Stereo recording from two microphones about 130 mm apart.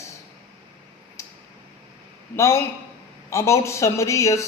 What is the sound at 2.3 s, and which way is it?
Speech, 20° left (ahead or behind).